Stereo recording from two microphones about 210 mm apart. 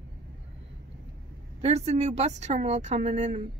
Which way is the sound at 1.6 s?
30° right (ahead or behind).